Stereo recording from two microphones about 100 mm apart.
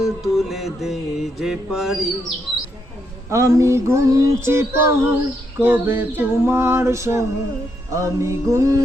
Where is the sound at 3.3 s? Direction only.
30° right (ahead or behind).